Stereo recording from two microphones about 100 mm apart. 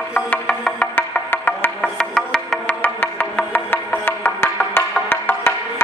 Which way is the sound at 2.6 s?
20° left (ahead or behind).